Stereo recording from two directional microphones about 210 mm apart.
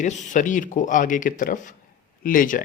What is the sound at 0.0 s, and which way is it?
Speech, 35° left (ahead or behind).